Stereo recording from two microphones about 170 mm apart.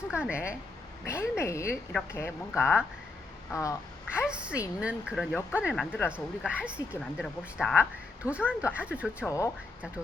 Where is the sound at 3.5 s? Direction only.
15° left (ahead or behind).